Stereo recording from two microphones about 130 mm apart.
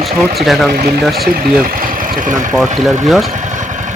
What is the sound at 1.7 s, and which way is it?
Speech, 90° right.